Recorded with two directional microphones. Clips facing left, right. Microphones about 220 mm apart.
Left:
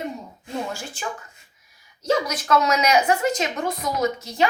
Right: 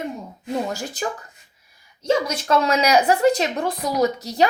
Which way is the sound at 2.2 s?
30° right (ahead or behind).